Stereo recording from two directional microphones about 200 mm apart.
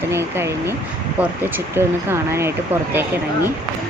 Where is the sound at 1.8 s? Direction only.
15° right (ahead or behind).